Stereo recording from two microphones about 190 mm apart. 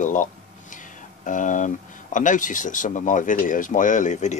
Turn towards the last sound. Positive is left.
turn(degrees=40)  # may be behind; listen again after turning